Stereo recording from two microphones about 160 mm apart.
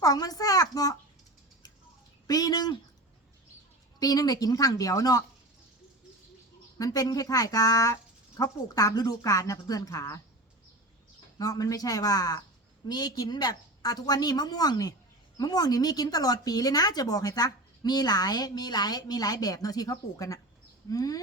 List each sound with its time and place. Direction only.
0.0 s speech: 25° left (ahead or behind)
2.2 s speech: 25° left (ahead or behind)
4.0 s speech: 25° left (ahead or behind)
6.7 s speech: 20° left (ahead or behind)
11.3 s speech: 20° left (ahead or behind)